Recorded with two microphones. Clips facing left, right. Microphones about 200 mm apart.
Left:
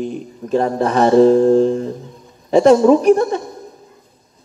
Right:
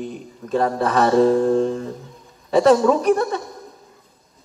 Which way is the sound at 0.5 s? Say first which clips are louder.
Left 3 dB; 30° left (ahead or behind).